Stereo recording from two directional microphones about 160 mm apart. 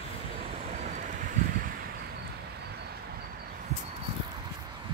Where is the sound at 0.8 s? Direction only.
55° right (ahead or behind).